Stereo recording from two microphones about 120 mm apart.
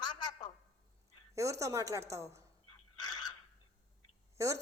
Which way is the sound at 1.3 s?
25° right (ahead or behind).